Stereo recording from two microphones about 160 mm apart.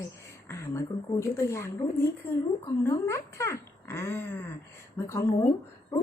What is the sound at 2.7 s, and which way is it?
Speech, 20° left (ahead or behind).